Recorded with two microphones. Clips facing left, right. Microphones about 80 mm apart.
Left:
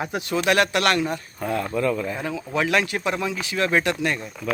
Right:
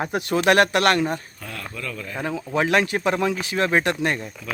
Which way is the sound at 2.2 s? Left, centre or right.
Right.